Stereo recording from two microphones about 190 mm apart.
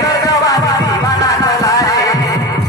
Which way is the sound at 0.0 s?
20° left (ahead or behind).